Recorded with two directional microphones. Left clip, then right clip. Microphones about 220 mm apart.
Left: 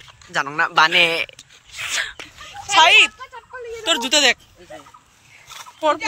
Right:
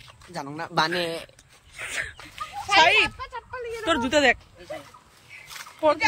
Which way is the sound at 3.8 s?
15° right (ahead or behind).